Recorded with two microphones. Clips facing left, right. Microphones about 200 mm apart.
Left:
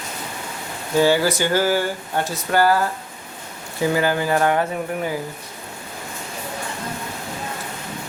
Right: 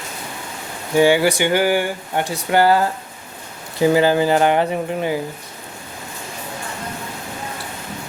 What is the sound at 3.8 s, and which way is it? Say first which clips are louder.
Speech: right 5 dB; 25° right (ahead or behind).